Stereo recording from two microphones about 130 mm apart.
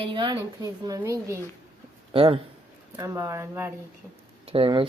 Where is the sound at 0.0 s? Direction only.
35° right (ahead or behind).